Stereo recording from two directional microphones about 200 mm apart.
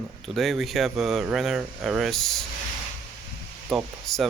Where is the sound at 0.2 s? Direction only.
Centre (ahead or behind).